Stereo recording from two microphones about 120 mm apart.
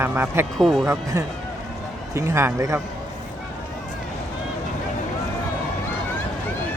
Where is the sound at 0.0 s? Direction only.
20° right (ahead or behind).